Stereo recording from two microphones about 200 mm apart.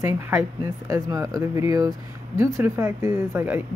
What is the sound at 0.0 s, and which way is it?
Speech, 10° right (ahead or behind).